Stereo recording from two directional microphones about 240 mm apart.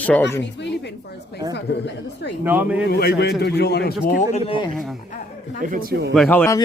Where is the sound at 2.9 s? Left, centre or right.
Left.